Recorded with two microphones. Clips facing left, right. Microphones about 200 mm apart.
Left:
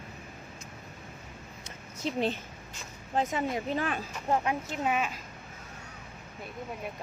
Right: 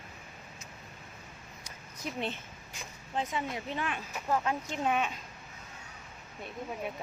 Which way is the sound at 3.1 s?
45° left (ahead or behind).